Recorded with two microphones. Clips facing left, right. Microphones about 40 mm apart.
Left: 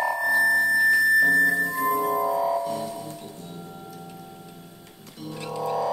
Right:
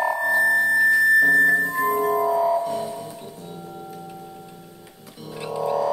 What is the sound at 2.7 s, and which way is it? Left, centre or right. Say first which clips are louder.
Music: right 3 dB; centre.